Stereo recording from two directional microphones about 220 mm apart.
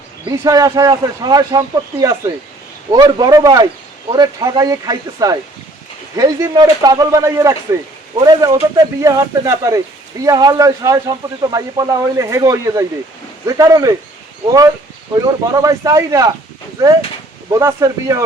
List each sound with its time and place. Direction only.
0.3 s speech: 15° right (ahead or behind)
15.2 s speech: 15° right (ahead or behind)
17.5 s speech: 15° right (ahead or behind)